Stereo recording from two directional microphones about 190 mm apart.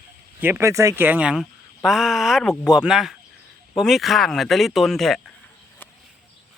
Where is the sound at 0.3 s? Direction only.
10° right (ahead or behind).